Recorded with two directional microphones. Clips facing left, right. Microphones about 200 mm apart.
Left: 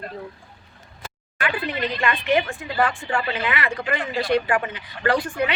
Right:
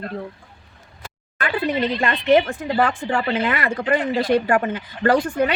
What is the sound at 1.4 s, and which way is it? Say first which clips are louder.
A woman's voice: right 4 dB; 40° right (ahead or behind).